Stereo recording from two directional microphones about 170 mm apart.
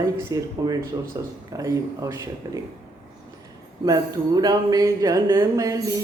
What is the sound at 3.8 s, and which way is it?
Speech, 20° right (ahead or behind).